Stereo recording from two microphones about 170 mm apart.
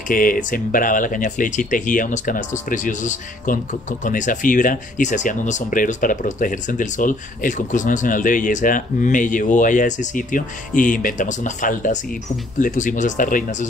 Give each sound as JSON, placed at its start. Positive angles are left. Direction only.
{"t": 0.1, "sound": "speech", "side_deg": 55}